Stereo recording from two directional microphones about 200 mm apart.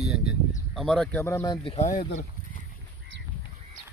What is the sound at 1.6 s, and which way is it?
Speech, 35° left (ahead or behind).